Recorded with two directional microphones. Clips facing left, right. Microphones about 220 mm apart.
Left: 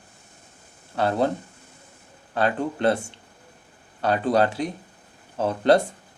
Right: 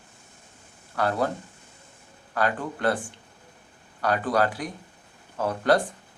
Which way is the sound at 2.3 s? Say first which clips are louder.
Left 3 dB; 25° left (ahead or behind).